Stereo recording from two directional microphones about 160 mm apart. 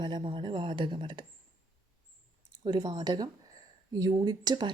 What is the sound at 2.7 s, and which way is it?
Speech, 25° right (ahead or behind).